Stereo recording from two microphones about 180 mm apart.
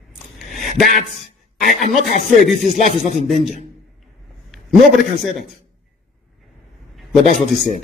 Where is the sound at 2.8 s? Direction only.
45° right (ahead or behind).